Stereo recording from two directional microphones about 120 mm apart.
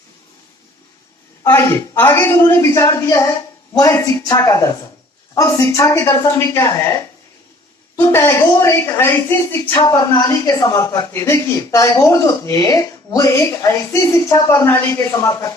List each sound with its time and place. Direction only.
1.5 s speech: 20° left (ahead or behind)
7.9 s speech: 20° left (ahead or behind)